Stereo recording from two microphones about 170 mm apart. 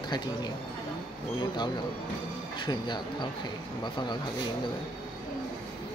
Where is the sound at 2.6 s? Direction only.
25° left (ahead or behind).